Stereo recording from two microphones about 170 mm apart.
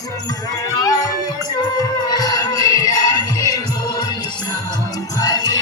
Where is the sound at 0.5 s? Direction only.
20° left (ahead or behind).